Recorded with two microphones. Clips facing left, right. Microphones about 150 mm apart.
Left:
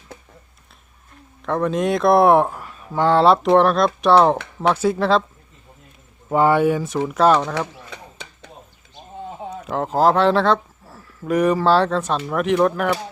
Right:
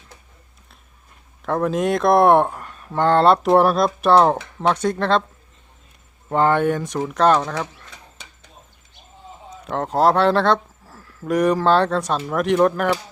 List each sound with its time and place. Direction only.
1.5 s speech: centre (ahead or behind)
6.2 s speech: 5° left (ahead or behind)
9.4 s a sound: 60° left (ahead or behind)
9.6 s speech: centre (ahead or behind)